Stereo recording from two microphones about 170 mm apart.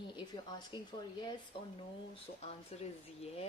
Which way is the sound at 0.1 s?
25° left (ahead or behind).